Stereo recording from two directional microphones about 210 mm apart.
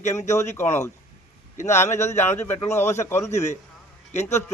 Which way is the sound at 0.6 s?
10° left (ahead or behind).